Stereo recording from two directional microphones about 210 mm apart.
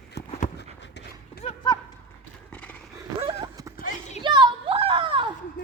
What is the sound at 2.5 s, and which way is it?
Horse, 5° left (ahead or behind).